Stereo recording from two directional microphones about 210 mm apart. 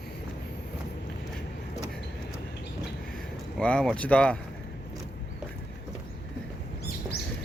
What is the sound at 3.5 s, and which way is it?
Speech, 5° left (ahead or behind).